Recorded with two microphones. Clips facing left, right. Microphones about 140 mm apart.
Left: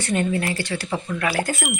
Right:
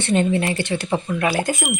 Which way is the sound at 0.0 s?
25° right (ahead or behind).